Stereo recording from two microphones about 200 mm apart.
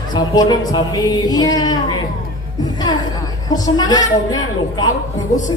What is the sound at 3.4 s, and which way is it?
A man's voice, 20° left (ahead or behind).